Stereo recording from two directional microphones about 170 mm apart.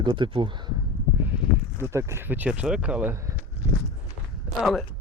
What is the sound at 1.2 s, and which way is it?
Speech, 10° right (ahead or behind).